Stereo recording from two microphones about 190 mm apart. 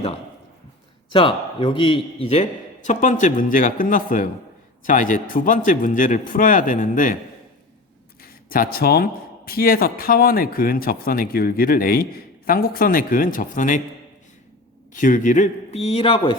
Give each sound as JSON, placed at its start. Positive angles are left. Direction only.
{"t": 1.1, "sound": "a man's voice", "side_deg": 25}
{"t": 8.4, "sound": "speech", "side_deg": 50}
{"t": 14.9, "sound": "a man's voice", "side_deg": 40}